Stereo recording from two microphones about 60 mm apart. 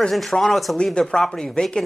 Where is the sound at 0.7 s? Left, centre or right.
Centre.